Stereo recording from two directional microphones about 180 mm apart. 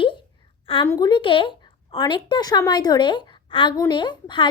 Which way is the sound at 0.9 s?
20° left (ahead or behind).